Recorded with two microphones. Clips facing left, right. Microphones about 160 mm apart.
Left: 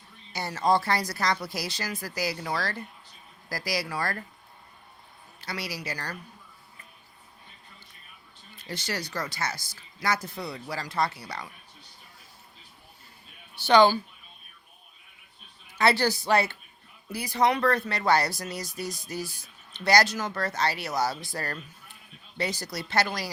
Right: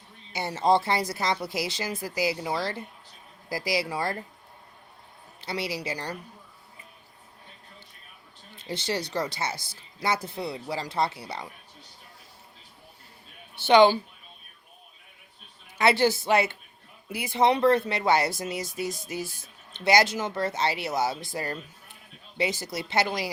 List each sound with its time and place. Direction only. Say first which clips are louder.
0.3 s speech: right 2 dB; 20° right (ahead or behind)
5.4 s speech: right 4 dB; 25° right (ahead or behind)
8.5 s speech: right 4 dB; 25° right (ahead or behind)
13.6 s speech: right 2 dB; 25° right (ahead or behind)
15.8 s speech: right 2 dB; 20° right (ahead or behind)